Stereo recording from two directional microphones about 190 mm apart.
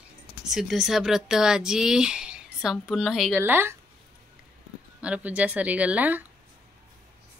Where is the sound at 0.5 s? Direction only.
Centre (ahead or behind).